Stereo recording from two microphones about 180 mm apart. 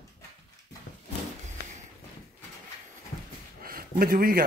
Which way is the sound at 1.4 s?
40° right (ahead or behind).